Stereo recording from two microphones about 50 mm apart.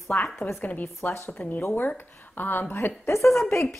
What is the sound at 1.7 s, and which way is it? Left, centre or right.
Speech, left.